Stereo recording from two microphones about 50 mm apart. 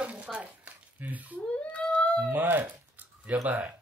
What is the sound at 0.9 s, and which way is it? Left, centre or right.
Speech, right.